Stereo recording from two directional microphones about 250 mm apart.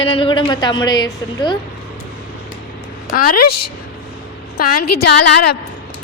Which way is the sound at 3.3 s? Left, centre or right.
Left.